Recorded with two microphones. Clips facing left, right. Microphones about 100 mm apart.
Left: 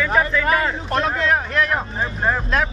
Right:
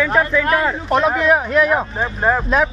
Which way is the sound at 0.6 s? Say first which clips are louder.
Right 5 dB; 15° right (ahead or behind).